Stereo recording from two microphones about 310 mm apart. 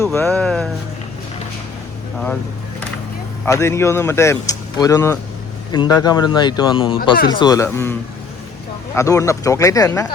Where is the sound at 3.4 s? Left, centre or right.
Centre.